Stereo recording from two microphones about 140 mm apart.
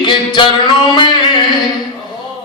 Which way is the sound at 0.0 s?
35° left (ahead or behind).